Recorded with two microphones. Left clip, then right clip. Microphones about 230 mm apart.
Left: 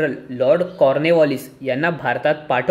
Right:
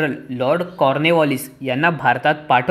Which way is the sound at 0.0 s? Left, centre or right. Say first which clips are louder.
Left 2 dB; right.